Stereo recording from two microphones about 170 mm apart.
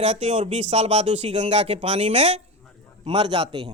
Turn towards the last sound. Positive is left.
turn(degrees=-25)  # may be behind; listen again after turning